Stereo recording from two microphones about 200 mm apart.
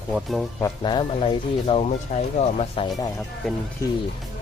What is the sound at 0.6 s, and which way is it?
Speech, 20° left (ahead or behind).